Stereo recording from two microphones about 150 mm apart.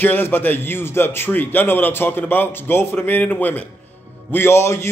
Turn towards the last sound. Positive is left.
turn(degrees=15)  # may be behind; listen again after turning